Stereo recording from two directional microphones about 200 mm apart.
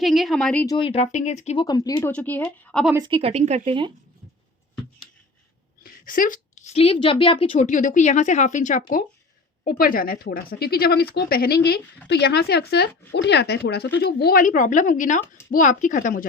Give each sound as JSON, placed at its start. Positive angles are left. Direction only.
{"t": 0.0, "sound": "speech", "side_deg": 0}
{"t": 0.6, "sound": "speech", "side_deg": 20}
{"t": 1.6, "sound": "speech", "side_deg": 20}
{"t": 2.1, "sound": "speech", "side_deg": 5}
{"t": 2.9, "sound": "speech", "side_deg": -25}
{"t": 5.8, "sound": "a woman's voice", "side_deg": 40}
{"t": 7.5, "sound": "speech", "side_deg": 40}